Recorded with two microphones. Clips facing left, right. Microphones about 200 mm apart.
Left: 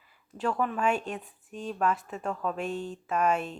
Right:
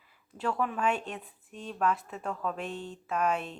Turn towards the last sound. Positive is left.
turn(degrees=0)  # may be behind; listen again after turning